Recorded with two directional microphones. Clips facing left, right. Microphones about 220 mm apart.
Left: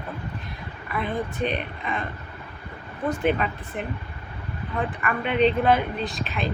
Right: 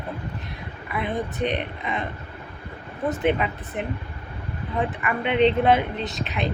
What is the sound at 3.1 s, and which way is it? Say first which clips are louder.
Speech: right 1 dB; 20° right (ahead or behind).